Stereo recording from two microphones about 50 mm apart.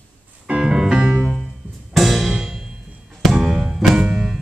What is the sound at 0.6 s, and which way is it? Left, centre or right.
Music, centre.